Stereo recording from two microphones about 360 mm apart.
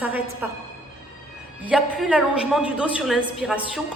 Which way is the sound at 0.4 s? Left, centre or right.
Centre.